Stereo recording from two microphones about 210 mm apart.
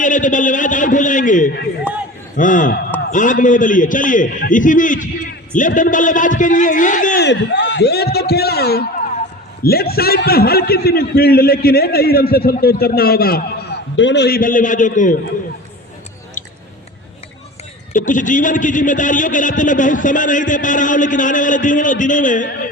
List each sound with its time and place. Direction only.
0.0 s a man's voice: 40° left (ahead or behind)
7.3 s a man's voice: 60° left (ahead or behind)
13.9 s a man's voice: 60° left (ahead or behind); by 15.2 s 40° left (ahead or behind)
16.4 s chewing: 40° left (ahead or behind)
17.9 s a man's voice: 40° left (ahead or behind)